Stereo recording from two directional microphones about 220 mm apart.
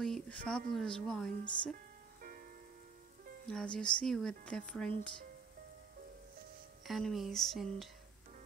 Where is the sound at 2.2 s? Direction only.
40° right (ahead or behind).